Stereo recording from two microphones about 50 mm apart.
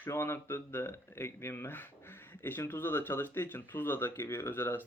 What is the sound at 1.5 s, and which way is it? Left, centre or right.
Speech, left.